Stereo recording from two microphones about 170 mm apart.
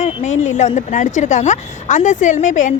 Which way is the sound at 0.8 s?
45° left (ahead or behind).